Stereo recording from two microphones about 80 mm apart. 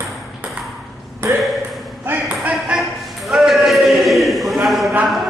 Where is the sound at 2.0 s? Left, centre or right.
Right.